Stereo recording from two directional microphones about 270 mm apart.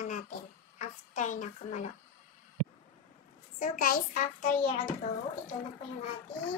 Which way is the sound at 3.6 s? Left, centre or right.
Left.